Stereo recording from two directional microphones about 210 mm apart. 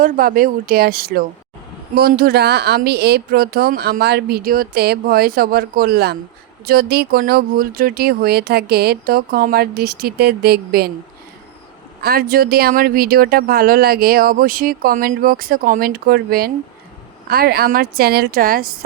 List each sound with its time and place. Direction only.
0.0 s speech: 40° right (ahead or behind)
12.0 s speech: 45° right (ahead or behind)